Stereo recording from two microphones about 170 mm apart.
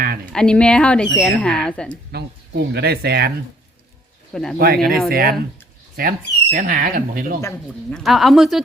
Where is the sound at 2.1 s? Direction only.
75° right (ahead or behind).